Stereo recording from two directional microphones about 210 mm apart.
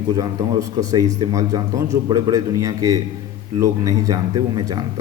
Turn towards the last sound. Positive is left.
turn(degrees=-20)  # may be behind; listen again after turning